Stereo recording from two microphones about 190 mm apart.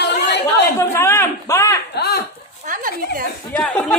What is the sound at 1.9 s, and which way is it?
Speech, 55° left (ahead or behind).